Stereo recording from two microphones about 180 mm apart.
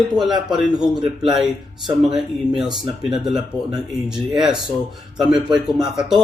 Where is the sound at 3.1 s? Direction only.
Centre (ahead or behind).